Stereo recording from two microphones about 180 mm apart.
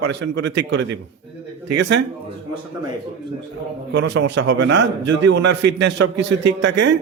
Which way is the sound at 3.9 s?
80° right.